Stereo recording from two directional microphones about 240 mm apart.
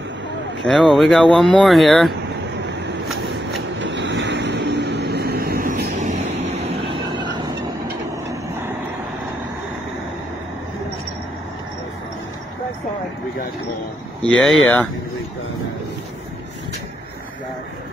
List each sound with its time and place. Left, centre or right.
0.7 s speech: centre
3.7 s vehicle: right
8.3 s vehicle: centre
14.2 s speech: centre